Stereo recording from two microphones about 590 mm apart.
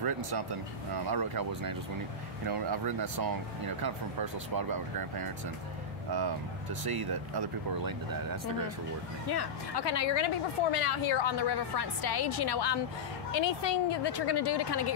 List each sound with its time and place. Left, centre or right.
1.1 s speech: right
6.8 s speech: right
9.3 s a woman's voice: left